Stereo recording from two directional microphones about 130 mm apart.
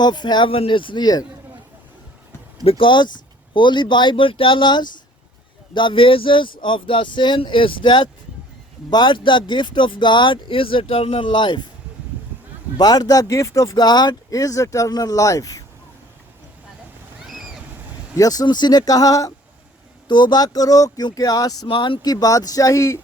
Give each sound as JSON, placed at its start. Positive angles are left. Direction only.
{"t": 0.0, "sound": "speech", "side_deg": 35}
{"t": 2.6, "sound": "speech", "side_deg": 40}
{"t": 12.7, "sound": "speech", "side_deg": 30}
{"t": 18.2, "sound": "speech", "side_deg": 30}
{"t": 20.1, "sound": "speech", "side_deg": 35}